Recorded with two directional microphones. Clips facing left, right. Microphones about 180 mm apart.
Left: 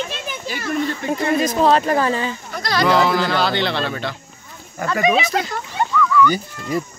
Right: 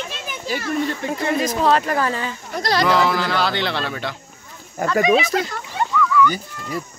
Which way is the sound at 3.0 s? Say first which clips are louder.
Left 2 dB; centre (ahead or behind).